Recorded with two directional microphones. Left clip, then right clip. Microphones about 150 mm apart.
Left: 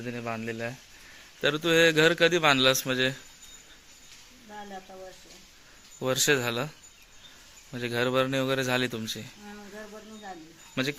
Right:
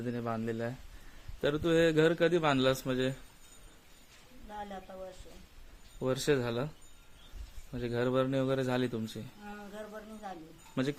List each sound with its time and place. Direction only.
0.0 s speech: 15° right (ahead or behind)
1.4 s a man's voice: 5° right (ahead or behind)
6.0 s a man's voice: centre (ahead or behind)
7.7 s a man's voice: centre (ahead or behind)
10.8 s speech: 10° right (ahead or behind)